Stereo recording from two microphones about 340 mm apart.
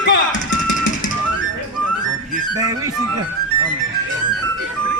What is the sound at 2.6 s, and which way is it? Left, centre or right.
Speech, centre.